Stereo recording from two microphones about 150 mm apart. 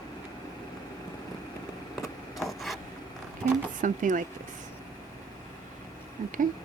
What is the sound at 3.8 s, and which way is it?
Speech, 60° right (ahead or behind).